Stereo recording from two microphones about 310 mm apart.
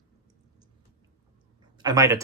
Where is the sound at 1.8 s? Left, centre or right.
Centre.